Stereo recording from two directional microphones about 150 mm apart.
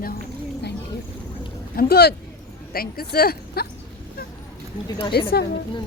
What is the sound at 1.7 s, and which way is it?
Speech, 85° left.